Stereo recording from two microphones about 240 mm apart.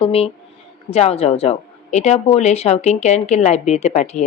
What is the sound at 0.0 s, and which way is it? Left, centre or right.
Speech, left.